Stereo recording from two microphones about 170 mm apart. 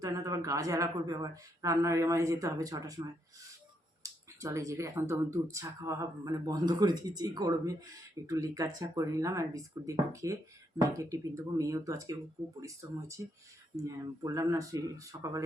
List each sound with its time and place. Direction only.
0.0 s speech: 20° right (ahead or behind)